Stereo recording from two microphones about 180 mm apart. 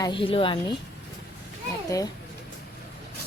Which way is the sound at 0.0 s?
30° left (ahead or behind).